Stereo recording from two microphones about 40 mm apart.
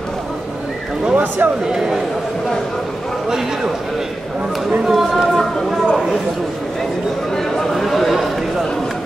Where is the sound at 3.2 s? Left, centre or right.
Centre.